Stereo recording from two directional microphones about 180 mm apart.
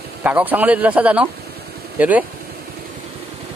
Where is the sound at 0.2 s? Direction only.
10° right (ahead or behind).